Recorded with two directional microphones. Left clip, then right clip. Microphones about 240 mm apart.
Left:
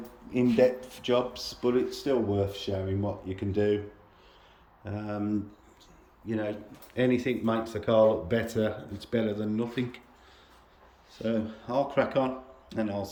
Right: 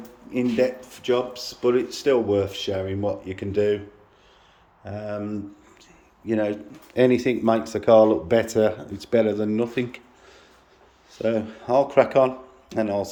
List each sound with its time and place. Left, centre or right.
0.3 s speech: centre
4.9 s speech: centre
6.2 s speech: centre
11.2 s speech: centre